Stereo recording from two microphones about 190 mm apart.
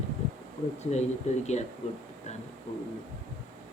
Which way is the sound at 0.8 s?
35° left (ahead or behind).